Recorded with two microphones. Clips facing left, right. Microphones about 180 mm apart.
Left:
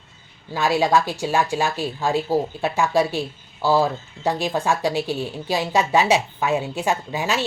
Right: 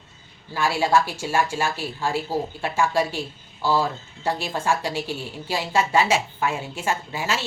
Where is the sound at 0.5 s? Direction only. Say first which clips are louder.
Left 2 dB; 15° left (ahead or behind).